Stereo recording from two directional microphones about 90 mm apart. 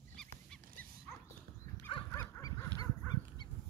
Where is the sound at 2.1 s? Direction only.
35° left (ahead or behind).